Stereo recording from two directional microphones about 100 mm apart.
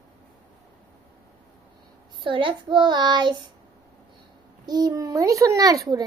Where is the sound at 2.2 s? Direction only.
55° right (ahead or behind).